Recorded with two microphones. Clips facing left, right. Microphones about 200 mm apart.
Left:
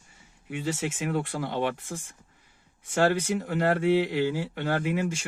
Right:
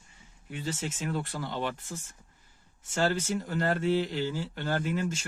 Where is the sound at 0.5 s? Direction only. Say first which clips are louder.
Left 5 dB; 70° left (ahead or behind).